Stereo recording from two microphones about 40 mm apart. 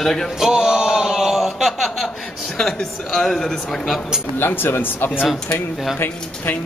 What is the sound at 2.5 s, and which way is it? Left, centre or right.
Speech, centre.